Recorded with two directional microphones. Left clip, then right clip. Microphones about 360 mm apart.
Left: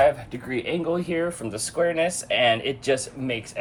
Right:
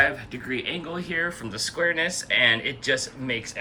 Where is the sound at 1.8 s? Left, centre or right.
Left.